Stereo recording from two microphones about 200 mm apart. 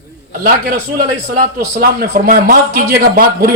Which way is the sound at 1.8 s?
45° right (ahead or behind).